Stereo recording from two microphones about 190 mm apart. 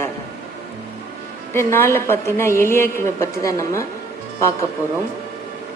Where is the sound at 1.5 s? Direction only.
15° left (ahead or behind).